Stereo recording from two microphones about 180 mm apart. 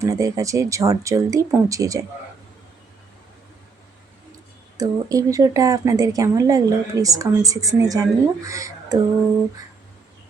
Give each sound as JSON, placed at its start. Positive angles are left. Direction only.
{"t": 0.0, "sound": "speech", "side_deg": -20}
{"t": 4.8, "sound": "speech", "side_deg": -20}